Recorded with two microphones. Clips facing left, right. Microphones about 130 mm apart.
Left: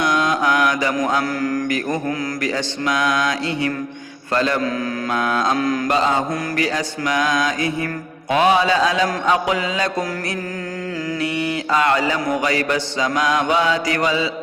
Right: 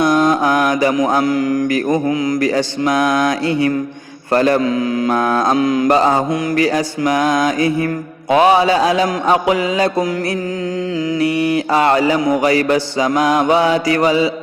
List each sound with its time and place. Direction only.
0.0 s mantra: 35° right (ahead or behind)
1.2 s mantra: 20° right (ahead or behind)
2.6 s mantra: 35° right (ahead or behind)
5.5 s mantra: 20° right (ahead or behind)
5.9 s mantra: 40° right (ahead or behind)
11.3 s a sound: 25° left (ahead or behind)
11.7 s mantra: 30° right (ahead or behind)